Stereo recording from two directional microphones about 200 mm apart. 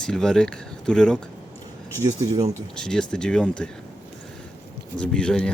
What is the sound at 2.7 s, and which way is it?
Speech, 5° left (ahead or behind).